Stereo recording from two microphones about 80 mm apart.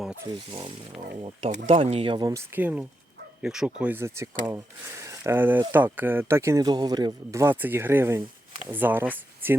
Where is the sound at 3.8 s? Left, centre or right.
Right.